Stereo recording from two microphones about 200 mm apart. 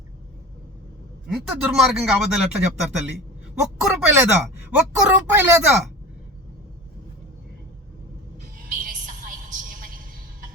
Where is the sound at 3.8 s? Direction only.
5° right (ahead or behind).